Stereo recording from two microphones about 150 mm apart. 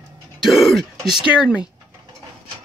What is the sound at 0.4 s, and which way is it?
Throat clearing, centre (ahead or behind).